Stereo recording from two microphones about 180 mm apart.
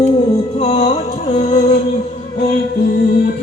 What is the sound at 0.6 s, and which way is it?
Music, 35° left (ahead or behind).